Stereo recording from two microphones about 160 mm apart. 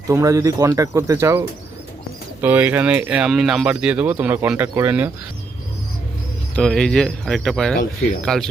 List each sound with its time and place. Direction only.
0.1 s speech: 20° right (ahead or behind)
6.6 s speech: 5° left (ahead or behind)